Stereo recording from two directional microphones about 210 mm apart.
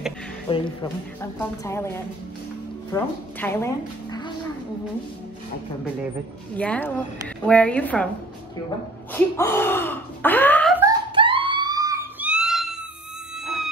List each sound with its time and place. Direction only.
0.5 s speech: 25° left (ahead or behind)
1.2 s a woman's voice: 10° left (ahead or behind)
6.5 s a woman's voice: 5° left (ahead or behind)
9.1 s speech: 10° left (ahead or behind)
10.8 s a sound: 20° right (ahead or behind); by 12.7 s centre (ahead or behind)